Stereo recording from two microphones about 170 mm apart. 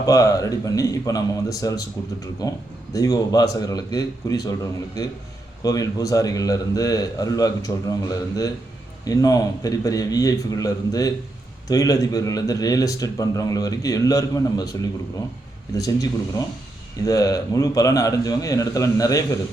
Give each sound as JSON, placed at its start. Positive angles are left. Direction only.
{"t": 0.0, "sound": "speech", "side_deg": 20}
{"t": 17.1, "sound": "speech", "side_deg": 20}